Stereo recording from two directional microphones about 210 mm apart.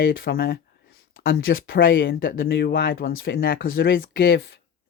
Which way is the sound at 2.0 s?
45° left (ahead or behind).